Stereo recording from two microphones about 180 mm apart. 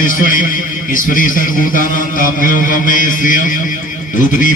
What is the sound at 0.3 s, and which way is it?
A man's voice, 50° left (ahead or behind).